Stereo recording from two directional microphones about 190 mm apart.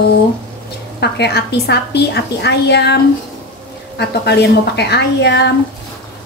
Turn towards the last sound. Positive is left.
turn(degrees=65)  # may be behind; listen again after turning